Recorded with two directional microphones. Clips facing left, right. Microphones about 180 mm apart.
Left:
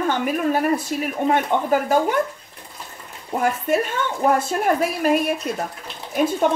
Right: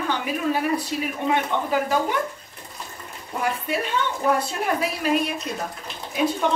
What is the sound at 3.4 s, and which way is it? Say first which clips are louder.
Speech: left 5 dB; 45° left (ahead or behind).